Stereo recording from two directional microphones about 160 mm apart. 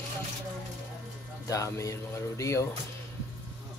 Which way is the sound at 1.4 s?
20° left (ahead or behind).